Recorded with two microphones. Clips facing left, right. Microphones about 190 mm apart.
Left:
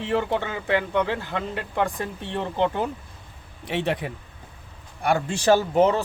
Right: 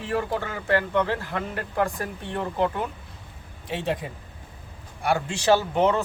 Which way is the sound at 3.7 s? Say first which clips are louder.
Left 2 dB; 70° left (ahead or behind).